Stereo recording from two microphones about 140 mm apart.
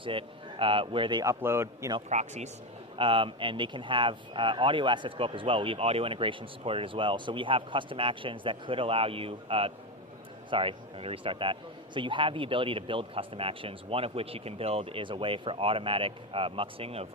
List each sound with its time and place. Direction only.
0.0 s a man's voice: 40° right (ahead or behind)
1.2 s a man's voice: 20° right (ahead or behind)
2.0 s speech: 55° right (ahead or behind)
2.9 s speech: 40° right (ahead or behind)